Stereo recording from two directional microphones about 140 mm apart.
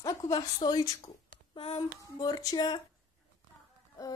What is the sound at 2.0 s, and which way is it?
Speech, 25° left (ahead or behind).